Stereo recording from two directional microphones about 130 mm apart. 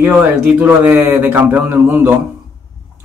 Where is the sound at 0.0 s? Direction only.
15° right (ahead or behind).